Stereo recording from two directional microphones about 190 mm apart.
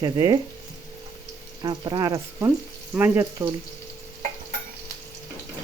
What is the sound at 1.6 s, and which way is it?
Speech, 20° right (ahead or behind).